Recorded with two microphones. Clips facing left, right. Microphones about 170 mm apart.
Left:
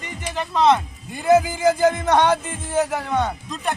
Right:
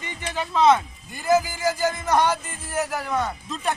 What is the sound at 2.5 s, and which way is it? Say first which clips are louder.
Speech: left 6 dB; 25° left (ahead or behind).